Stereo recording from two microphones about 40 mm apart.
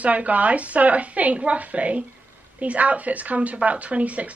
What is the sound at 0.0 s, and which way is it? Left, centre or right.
A woman's voice, right.